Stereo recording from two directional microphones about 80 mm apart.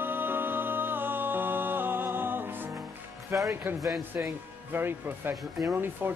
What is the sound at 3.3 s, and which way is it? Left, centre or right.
Speech, right.